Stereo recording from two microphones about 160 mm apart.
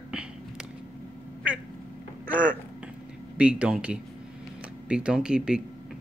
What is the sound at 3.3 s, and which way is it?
Speech, 5° right (ahead or behind).